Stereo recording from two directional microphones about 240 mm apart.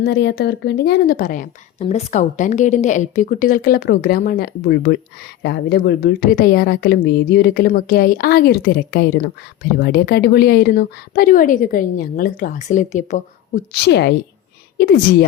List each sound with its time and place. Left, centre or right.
0.0 s a woman's voice: left
13.7 s a woman's voice: left